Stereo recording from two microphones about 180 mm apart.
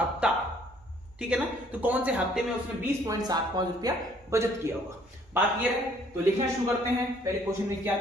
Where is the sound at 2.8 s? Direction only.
20° right (ahead or behind).